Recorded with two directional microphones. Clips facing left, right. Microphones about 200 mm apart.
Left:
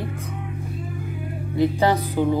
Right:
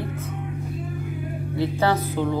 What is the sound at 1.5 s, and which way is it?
Music, 15° left (ahead or behind).